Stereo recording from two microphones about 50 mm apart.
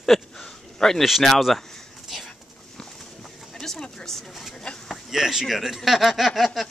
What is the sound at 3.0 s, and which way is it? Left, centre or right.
Bird, centre.